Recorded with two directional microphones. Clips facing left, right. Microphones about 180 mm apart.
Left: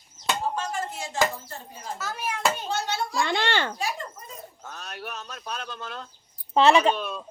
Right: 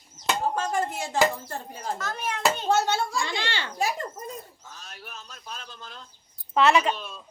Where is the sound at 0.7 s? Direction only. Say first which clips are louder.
Right 4 dB; 60° right (ahead or behind).